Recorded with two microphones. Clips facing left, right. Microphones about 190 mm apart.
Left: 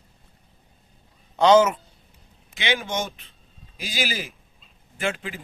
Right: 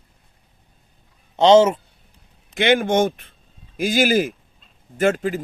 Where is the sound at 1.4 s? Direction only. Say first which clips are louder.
Right 4 dB; 25° right (ahead or behind).